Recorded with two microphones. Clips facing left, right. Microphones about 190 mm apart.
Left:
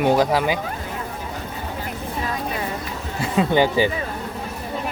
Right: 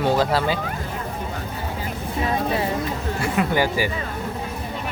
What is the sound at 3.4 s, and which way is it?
Speech, 25° left (ahead or behind).